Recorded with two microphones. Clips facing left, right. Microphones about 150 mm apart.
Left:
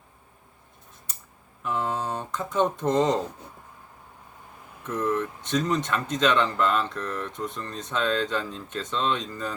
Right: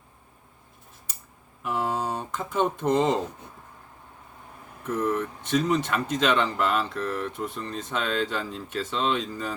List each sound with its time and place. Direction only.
1.6 s speech: 10° right (ahead or behind)
5.0 s speech: 10° right (ahead or behind)